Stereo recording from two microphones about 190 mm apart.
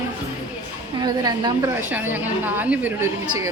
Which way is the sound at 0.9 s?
20° right (ahead or behind).